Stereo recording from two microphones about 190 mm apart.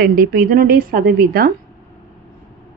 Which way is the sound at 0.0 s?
50° right (ahead or behind).